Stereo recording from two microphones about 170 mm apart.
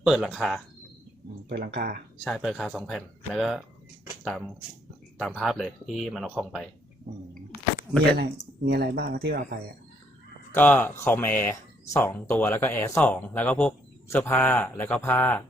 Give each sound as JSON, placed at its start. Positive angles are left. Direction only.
{"t": 0.0, "sound": "speech", "side_deg": 0}
{"t": 1.5, "sound": "speech", "side_deg": -70}
{"t": 2.2, "sound": "speech", "side_deg": 0}
{"t": 8.6, "sound": "speech", "side_deg": -70}
{"t": 10.5, "sound": "a man's voice", "side_deg": 10}